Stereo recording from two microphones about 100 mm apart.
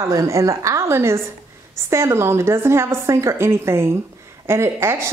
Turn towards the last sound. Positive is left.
turn(degrees=-25)  # may be behind; listen again after turning